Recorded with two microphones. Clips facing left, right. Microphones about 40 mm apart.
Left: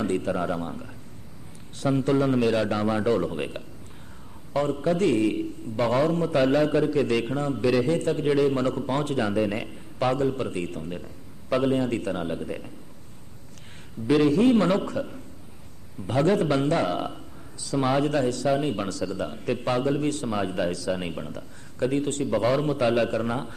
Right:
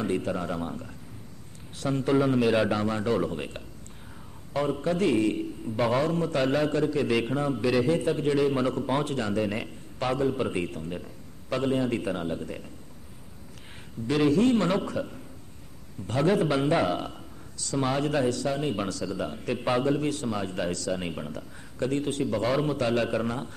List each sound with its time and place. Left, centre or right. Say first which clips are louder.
0.0 s a man's voice: left 3 dB; centre
3.3 s a man's voice: left 3 dB; centre
4.6 s a man's voice: left 3 dB; centre
14.0 s a man's voice: left 3 dB; centre
16.8 s a man's voice: left 1 dB; centre
20.2 s a man's voice: left 3 dB; centre